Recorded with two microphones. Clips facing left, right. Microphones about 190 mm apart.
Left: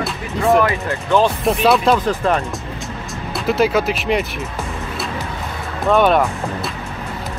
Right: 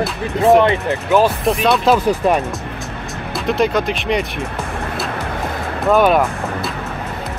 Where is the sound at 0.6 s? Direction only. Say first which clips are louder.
Right 3 dB; 20° right (ahead or behind).